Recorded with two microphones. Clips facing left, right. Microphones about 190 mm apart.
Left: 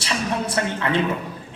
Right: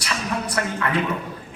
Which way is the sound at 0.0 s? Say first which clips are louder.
Left 2 dB; 25° left (ahead or behind).